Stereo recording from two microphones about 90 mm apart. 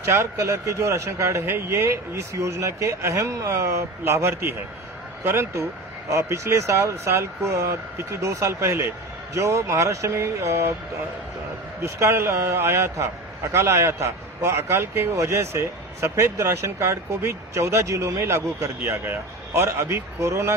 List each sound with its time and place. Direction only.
0.1 s a man's voice: 30° right (ahead or behind)
11.8 s a man's voice: 30° right (ahead or behind)